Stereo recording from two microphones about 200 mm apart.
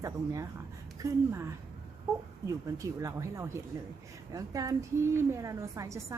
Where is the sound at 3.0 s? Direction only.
15° right (ahead or behind).